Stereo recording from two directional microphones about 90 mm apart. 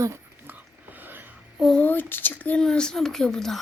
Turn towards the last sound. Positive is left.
turn(degrees=5)  # may be behind; listen again after turning